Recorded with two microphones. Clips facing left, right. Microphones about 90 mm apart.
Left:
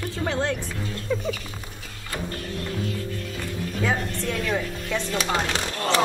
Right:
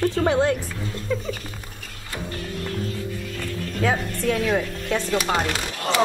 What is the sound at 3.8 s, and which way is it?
Speech, centre (ahead or behind).